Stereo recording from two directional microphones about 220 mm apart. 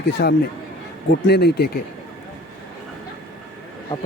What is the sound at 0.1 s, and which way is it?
Speech, 50° left (ahead or behind).